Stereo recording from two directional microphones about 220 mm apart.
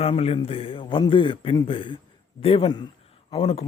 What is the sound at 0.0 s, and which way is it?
A man's voice, 25° left (ahead or behind).